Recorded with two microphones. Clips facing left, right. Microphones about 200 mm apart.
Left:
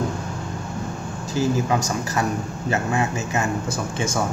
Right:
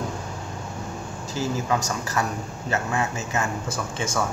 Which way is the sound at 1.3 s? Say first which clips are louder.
Left 4 dB; 15° left (ahead or behind).